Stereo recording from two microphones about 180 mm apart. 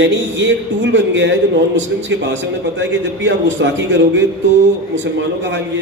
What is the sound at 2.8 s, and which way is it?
A man's voice, 90° right.